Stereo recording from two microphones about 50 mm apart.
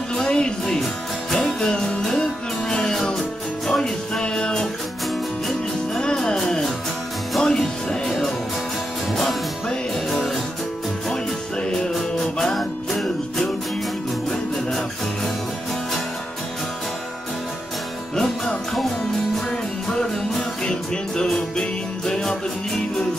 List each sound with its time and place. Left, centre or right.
0.1 s music: centre
6.2 s music: centre
9.1 s music: centre
11.6 s music: centre
18.1 s music: centre
19.9 s music: centre